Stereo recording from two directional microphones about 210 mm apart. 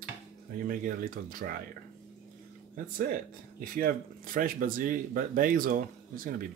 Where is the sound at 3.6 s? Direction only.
45° right (ahead or behind).